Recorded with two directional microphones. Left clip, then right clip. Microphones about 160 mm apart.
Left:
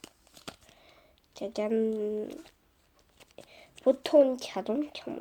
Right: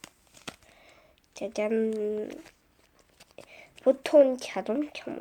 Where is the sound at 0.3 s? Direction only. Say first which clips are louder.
Right 3 dB; 5° left (ahead or behind).